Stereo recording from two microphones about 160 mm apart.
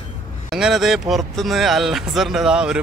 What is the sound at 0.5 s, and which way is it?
Speech, centre (ahead or behind).